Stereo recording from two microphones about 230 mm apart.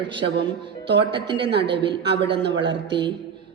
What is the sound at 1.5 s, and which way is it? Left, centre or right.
A woman's voice, right.